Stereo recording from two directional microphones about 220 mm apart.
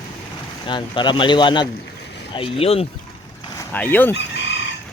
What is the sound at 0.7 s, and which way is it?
Speech, 20° left (ahead or behind).